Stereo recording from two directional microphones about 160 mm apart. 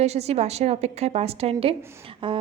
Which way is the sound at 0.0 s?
40° right (ahead or behind).